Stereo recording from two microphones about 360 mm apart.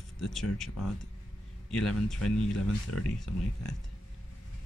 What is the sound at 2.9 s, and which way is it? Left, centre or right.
Speech, left.